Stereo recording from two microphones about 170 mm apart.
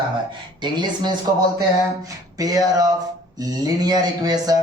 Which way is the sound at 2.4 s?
20° right (ahead or behind).